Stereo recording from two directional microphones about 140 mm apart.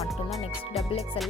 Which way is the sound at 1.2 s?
40° left (ahead or behind).